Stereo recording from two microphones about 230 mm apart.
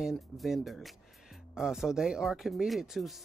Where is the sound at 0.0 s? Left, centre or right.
Centre.